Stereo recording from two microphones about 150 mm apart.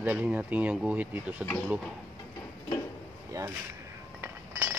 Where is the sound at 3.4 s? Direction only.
25° right (ahead or behind).